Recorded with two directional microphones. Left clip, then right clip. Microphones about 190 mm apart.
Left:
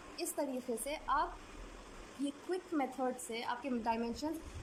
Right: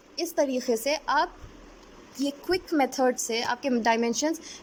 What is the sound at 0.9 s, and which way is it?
Speech, 35° right (ahead or behind).